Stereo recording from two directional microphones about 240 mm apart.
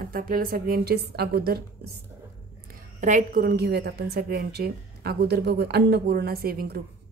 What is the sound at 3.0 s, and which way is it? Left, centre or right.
A woman's voice, right.